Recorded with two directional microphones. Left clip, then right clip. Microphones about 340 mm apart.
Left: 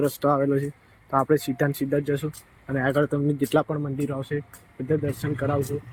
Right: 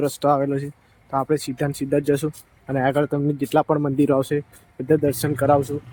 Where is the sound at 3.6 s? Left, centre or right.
Centre.